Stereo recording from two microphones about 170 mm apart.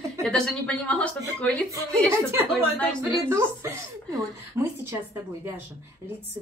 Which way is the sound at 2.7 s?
10° left (ahead or behind).